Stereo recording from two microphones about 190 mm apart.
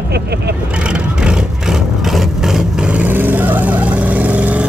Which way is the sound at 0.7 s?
5° right (ahead or behind).